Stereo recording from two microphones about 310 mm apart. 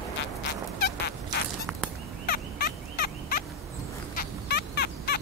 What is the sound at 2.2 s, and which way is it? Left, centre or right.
Fowl, left.